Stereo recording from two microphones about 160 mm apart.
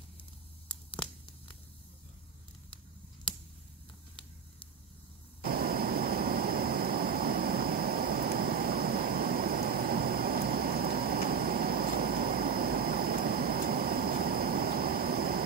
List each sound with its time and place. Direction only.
5.4 s vehicle: 70° right (ahead or behind)